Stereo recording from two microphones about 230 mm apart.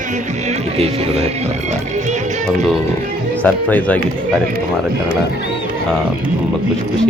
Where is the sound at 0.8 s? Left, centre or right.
Right.